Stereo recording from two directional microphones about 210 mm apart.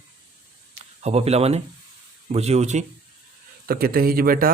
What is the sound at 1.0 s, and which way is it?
Speech, 30° right (ahead or behind).